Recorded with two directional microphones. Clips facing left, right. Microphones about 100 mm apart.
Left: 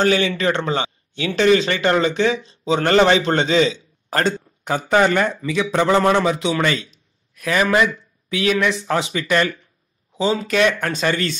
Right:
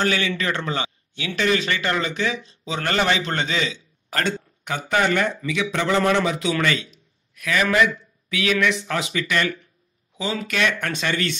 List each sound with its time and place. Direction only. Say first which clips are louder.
0.0 s speech: left 5 dB; 30° left (ahead or behind)